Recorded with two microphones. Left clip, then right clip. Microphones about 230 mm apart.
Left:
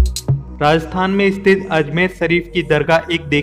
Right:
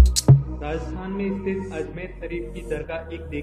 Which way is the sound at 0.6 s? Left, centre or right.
Left.